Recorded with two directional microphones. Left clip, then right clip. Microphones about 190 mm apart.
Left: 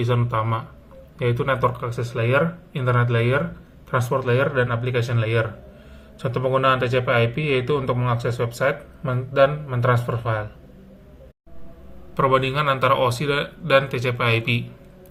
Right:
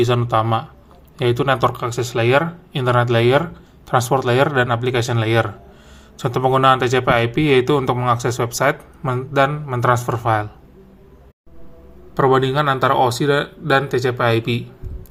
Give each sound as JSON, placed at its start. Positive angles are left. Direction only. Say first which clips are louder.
{"t": 0.0, "sound": "speech", "louder": "right 6 dB", "side_deg": -45}
{"t": 12.1, "sound": "speech", "louder": "right 4 dB", "side_deg": -40}